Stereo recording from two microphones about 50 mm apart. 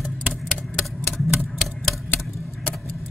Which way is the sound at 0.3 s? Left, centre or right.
Centre.